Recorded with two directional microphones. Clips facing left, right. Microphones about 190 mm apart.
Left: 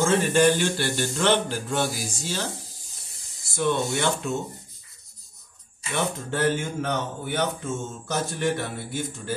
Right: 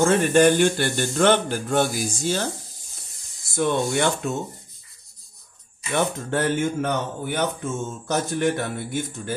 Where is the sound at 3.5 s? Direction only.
50° right (ahead or behind).